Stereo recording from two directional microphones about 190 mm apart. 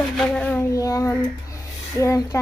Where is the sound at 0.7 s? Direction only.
20° left (ahead or behind).